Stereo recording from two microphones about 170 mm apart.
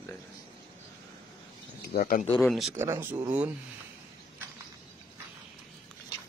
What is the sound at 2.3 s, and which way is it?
Speech, centre (ahead or behind).